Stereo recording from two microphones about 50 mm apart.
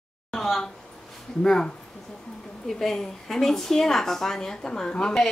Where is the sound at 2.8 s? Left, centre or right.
Centre.